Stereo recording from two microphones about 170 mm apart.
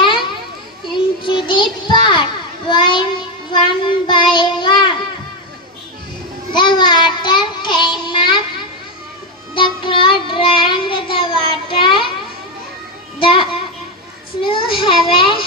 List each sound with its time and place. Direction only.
0.9 s child singing: 30° left (ahead or behind)
6.5 s child singing: 25° left (ahead or behind)
9.6 s child singing: 30° left (ahead or behind)
11.8 s a sound: 30° left (ahead or behind)
13.2 s a sound: 30° left (ahead or behind)
14.4 s child singing: 30° left (ahead or behind)